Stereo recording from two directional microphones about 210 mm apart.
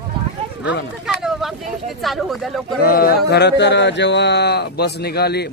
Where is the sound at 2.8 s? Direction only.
45° left (ahead or behind).